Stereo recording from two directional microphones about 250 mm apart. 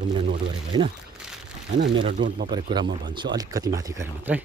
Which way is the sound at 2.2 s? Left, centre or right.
Right.